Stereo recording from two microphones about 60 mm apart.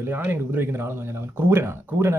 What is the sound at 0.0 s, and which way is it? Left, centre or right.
Speech, right.